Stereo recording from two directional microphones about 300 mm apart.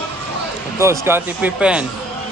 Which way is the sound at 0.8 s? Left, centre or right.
Centre.